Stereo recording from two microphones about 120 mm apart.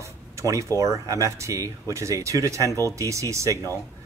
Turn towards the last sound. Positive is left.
turn(degrees=-25)  # may be behind; listen again after turning